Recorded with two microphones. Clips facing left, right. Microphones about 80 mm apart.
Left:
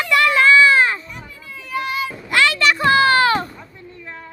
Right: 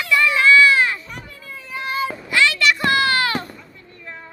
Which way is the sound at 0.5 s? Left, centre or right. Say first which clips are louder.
Left 1 dB; left.